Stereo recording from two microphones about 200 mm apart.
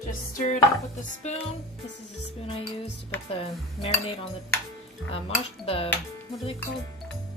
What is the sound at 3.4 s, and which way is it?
Speech, 30° left (ahead or behind).